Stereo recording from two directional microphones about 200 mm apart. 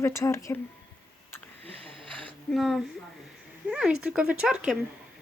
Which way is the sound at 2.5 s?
Centre (ahead or behind).